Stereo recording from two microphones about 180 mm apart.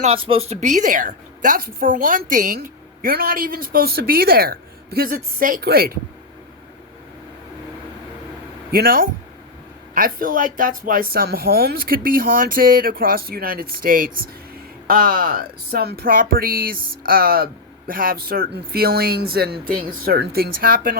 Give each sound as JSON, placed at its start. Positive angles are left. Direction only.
{"t": 0.0, "sound": "a woman's voice", "side_deg": -30}
{"t": 8.7, "sound": "a woman's voice", "side_deg": -55}